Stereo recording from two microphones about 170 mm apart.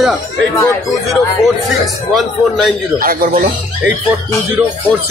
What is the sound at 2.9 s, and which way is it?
Speech, 55° right (ahead or behind).